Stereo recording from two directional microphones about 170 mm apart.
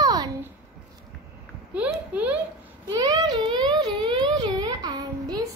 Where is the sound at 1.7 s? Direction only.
10° right (ahead or behind).